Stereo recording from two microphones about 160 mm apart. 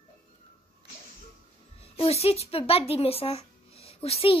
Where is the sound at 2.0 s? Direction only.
40° left (ahead or behind).